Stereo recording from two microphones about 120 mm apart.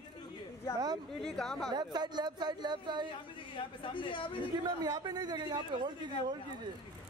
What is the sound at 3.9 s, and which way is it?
Speech, 45° left (ahead or behind).